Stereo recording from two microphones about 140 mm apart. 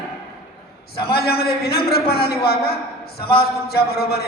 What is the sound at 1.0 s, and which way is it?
A man's voice, 90° left.